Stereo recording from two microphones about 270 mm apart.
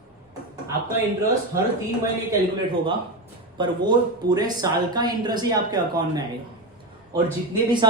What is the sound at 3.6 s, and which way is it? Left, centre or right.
A man's voice, centre.